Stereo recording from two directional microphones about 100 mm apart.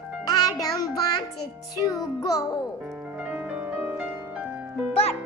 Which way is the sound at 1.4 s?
40° left (ahead or behind).